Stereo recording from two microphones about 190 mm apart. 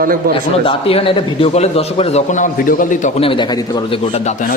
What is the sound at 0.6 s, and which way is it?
A man's voice, 30° left (ahead or behind).